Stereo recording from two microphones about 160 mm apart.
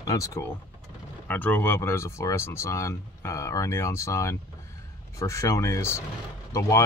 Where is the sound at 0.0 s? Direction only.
20° left (ahead or behind).